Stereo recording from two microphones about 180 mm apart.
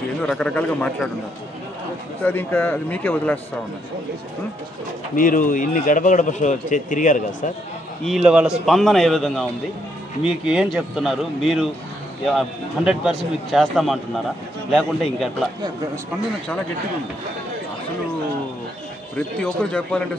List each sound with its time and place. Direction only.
0.2 s speech: 5° left (ahead or behind)
2.2 s speech: 10° left (ahead or behind)
5.1 s a man's voice: 50° left (ahead or behind)
8.0 s speech: centre (ahead or behind)
19.1 s speech: 5° left (ahead or behind)